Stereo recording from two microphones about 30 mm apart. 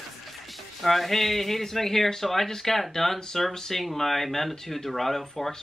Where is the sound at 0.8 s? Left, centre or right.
Centre.